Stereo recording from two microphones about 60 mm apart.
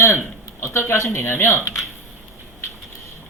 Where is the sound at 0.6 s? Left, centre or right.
Left.